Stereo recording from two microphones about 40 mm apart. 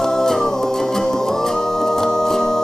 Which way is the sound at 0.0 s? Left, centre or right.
Centre.